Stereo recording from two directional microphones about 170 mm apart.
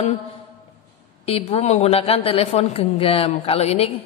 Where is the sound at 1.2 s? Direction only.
35° left (ahead or behind).